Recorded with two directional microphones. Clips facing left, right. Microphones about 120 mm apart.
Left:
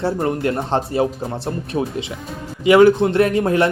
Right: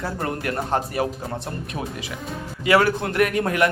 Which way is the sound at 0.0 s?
25° left (ahead or behind).